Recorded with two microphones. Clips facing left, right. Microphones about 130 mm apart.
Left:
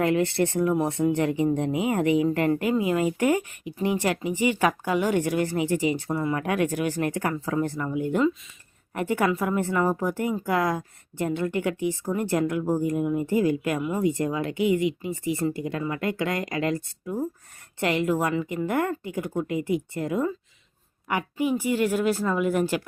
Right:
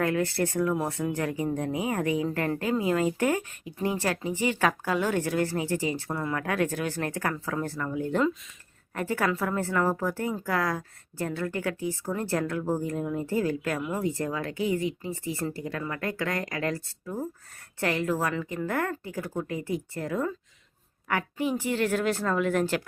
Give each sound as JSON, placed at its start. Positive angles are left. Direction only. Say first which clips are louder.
{"t": 0.0, "sound": "a woman's voice", "louder": "left 4 dB", "side_deg": 20}